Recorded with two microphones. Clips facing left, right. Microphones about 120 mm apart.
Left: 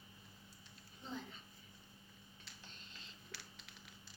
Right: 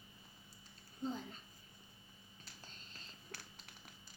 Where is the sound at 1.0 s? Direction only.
40° right (ahead or behind).